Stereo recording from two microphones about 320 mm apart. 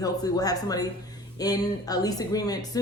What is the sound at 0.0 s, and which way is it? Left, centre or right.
A woman's voice, centre.